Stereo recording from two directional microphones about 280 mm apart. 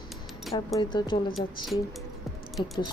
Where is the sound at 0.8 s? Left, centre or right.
Centre.